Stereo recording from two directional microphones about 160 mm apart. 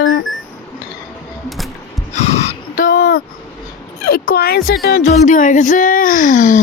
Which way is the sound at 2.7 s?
65° left (ahead or behind).